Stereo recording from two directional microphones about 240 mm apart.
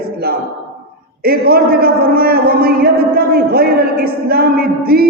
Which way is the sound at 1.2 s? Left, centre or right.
Right.